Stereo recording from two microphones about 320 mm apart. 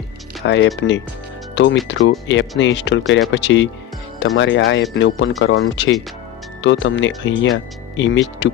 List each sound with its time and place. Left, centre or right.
0.4 s speech: left